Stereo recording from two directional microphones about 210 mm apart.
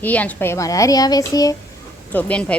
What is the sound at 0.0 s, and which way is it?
A child's voice, 5° left (ahead or behind).